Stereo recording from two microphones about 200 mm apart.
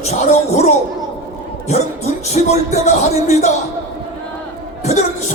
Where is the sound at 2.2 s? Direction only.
35° left (ahead or behind).